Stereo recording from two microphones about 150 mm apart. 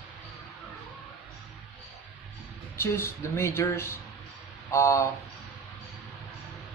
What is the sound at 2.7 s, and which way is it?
Speech, 15° left (ahead or behind).